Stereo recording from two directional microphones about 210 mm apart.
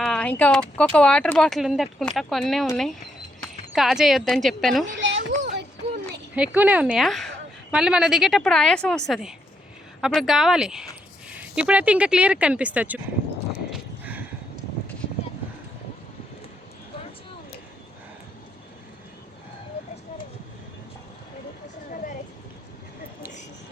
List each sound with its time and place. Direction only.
0.0 s speech: 5° left (ahead or behind)
4.9 s a sound: 60° right (ahead or behind)
6.3 s speech: 5° right (ahead or behind)
13.7 s horse: 5° right (ahead or behind)